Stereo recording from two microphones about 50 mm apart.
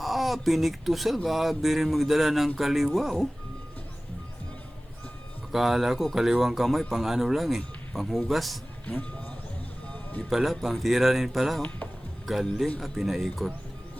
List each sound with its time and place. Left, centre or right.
0.0 s speech: centre
5.5 s speech: centre
8.9 s speech: left
9.9 s music: left
10.2 s speech: centre